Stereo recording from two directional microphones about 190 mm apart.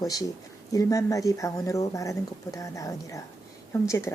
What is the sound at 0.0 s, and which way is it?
Speech, 20° left (ahead or behind).